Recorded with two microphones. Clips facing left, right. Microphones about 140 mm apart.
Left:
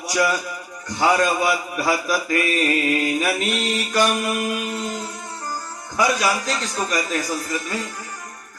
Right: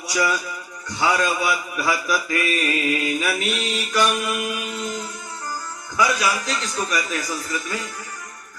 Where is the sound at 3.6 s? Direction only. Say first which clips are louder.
Left 2 dB; 35° left (ahead or behind).